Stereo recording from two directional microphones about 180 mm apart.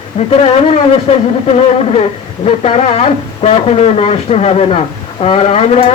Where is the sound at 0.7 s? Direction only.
35° left (ahead or behind).